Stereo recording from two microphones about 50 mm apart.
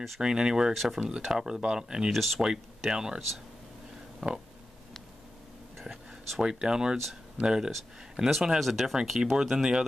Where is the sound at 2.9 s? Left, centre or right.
Centre.